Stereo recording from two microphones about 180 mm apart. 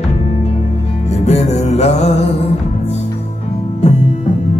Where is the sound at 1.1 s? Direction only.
35° left (ahead or behind).